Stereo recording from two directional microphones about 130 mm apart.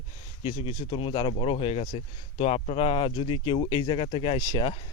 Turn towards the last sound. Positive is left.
turn(degrees=30)  # may be behind; listen again after turning